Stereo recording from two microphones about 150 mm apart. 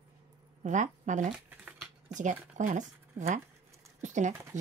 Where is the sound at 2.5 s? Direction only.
55° right (ahead or behind).